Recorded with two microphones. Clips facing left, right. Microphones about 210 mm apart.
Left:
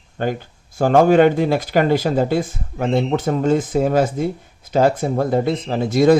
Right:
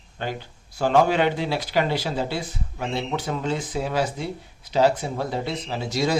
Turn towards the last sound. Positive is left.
turn(degrees=55)  # may be behind; listen again after turning